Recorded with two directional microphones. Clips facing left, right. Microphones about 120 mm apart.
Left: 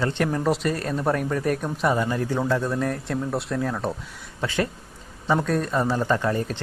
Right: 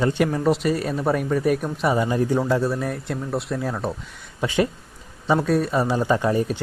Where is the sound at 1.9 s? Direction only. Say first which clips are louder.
Right 3 dB; 15° right (ahead or behind).